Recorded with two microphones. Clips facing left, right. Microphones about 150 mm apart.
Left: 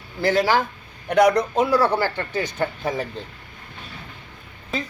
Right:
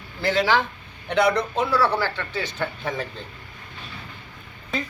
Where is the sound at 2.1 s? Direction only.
45° left (ahead or behind).